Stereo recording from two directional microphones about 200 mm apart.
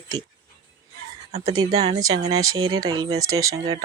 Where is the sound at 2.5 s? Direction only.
90° right.